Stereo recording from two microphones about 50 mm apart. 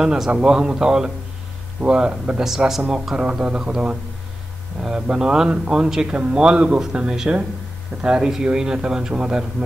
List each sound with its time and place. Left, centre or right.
0.0 s speech: centre
2.4 s speech: centre
3.2 s speech: right
5.0 s speech: centre